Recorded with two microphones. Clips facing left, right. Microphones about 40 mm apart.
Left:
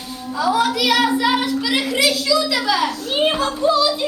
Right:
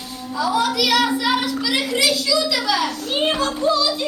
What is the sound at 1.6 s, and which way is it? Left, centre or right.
A child's voice, centre.